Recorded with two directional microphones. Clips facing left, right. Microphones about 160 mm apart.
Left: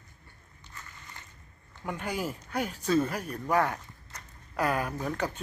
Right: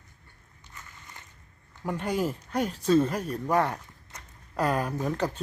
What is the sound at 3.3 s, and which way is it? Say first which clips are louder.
Speech: right 1 dB; 10° right (ahead or behind).